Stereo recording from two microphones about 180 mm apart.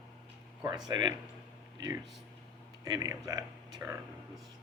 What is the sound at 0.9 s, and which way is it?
Speech, 25° right (ahead or behind).